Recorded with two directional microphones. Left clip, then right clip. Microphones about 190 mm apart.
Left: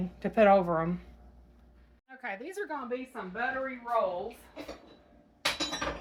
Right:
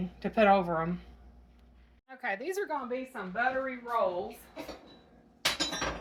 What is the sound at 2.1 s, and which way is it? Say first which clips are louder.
Speech: right 5 dB; 20° right (ahead or behind).